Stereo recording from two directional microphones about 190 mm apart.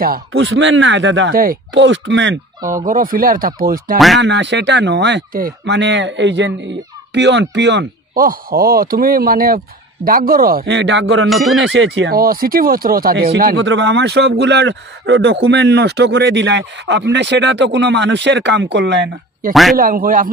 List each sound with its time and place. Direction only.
0.3 s speech: 70° right (ahead or behind)
1.3 s speech: 50° right (ahead or behind)
1.7 s speech: 75° right (ahead or behind)
2.8 s speech: 45° right (ahead or behind)
4.2 s speech: 70° right (ahead or behind)
5.8 s speech: 70° right (ahead or behind)
8.1 s speech: 50° right (ahead or behind); by 12.1 s 75° right (ahead or behind)
12.1 s speech: 50° right (ahead or behind)
13.6 s speech: 70° right (ahead or behind)
19.5 s speech: centre (ahead or behind)
19.8 s speech: 50° right (ahead or behind)